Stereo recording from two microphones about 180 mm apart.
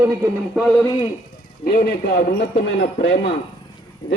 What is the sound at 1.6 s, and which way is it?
Speech, 60° left (ahead or behind).